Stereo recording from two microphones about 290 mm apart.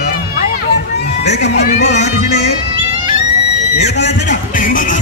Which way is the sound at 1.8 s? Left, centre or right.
Left.